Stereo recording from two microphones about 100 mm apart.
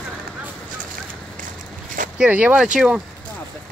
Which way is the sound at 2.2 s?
15° right (ahead or behind).